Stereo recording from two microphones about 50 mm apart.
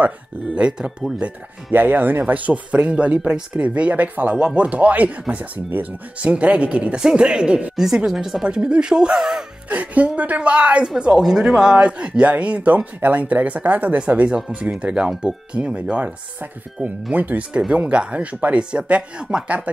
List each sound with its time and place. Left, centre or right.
0.6 s speech: centre
1.7 s speech: right; by 7.6 s centre
7.7 s speech: centre
8.5 s speech: centre
9.7 s speech: right
11.1 s speech: centre
16.8 s speech: right